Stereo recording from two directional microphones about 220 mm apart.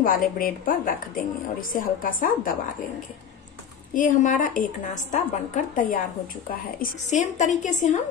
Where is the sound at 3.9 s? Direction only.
35° left (ahead or behind).